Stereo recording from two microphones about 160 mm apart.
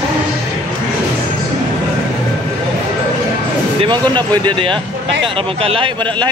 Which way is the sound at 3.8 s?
30° right (ahead or behind).